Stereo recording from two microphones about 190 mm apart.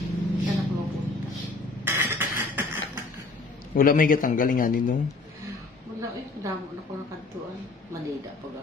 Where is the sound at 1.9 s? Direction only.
10° right (ahead or behind).